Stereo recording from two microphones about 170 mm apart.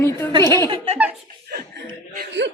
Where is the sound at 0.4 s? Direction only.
20° left (ahead or behind).